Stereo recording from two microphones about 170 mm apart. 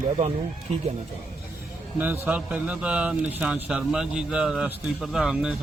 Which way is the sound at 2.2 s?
10° right (ahead or behind).